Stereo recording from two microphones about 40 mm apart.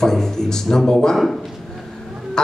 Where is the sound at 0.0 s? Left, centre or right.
Centre.